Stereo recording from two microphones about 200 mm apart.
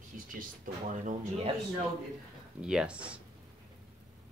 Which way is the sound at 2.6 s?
5° right (ahead or behind).